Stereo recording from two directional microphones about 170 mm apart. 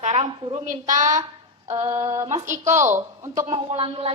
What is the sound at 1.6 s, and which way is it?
Female singing, 40° right (ahead or behind).